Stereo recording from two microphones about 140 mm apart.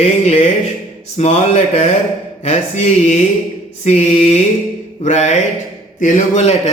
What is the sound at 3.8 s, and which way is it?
Speech, 50° left (ahead or behind).